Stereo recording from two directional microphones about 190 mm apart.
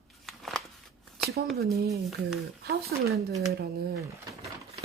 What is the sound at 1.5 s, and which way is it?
Speech, 55° right (ahead or behind).